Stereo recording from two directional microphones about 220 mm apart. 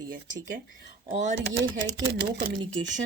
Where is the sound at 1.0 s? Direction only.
35° right (ahead or behind).